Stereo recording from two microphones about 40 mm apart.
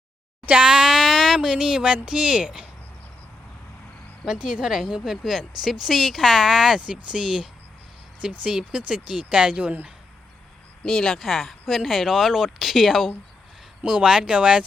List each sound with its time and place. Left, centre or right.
0.6 s speech: right
0.9 s a sound: centre
1.4 s speech: centre
4.4 s a woman's voice: centre
5.4 s speech: centre
6.7 s speech: right
8.4 s speech: right
9.5 s speech: right
10.8 s speech: centre
11.2 s speech: centre
13.8 s speech: centre